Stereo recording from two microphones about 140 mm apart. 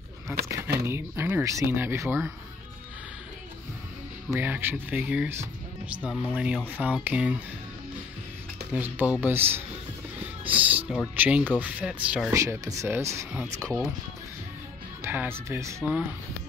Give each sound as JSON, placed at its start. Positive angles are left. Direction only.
{"t": 0.3, "sound": "speech", "side_deg": -20}
{"t": 4.3, "sound": "speech", "side_deg": -15}
{"t": 8.7, "sound": "speech", "side_deg": -10}
{"t": 12.4, "sound": "speech", "side_deg": -20}
{"t": 15.0, "sound": "speech", "side_deg": -15}